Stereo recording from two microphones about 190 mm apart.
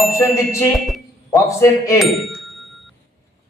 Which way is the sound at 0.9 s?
Centre (ahead or behind).